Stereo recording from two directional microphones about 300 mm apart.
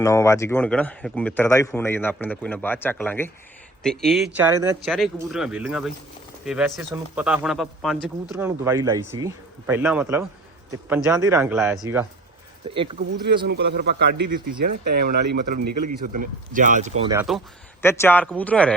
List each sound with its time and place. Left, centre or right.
0.0 s a man's voice: centre
12.7 s speech: centre
13.2 s a man's voice: right
17.0 s speech: centre
17.8 s a man's voice: centre